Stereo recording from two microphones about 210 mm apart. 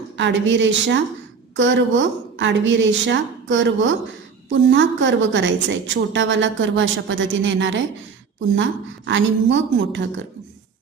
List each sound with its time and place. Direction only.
0.2 s a woman's voice: 60° right (ahead or behind)